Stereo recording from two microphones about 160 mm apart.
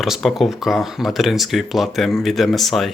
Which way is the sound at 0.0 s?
Centre (ahead or behind).